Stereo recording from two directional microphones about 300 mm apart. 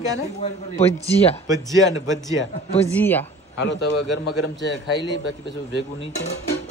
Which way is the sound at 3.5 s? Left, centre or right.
Left.